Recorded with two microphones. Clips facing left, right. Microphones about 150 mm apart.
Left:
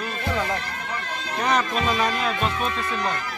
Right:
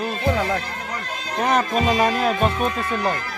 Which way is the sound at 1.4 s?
45° right (ahead or behind).